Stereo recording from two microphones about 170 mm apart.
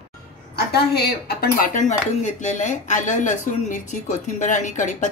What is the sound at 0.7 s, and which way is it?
Speech, 70° left (ahead or behind).